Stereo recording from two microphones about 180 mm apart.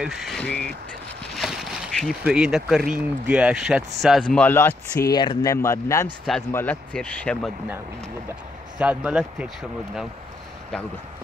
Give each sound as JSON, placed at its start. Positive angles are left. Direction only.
{"t": 0.0, "sound": "speech", "side_deg": 0}
{"t": 5.1, "sound": "speech", "side_deg": 25}
{"t": 8.7, "sound": "speech", "side_deg": -5}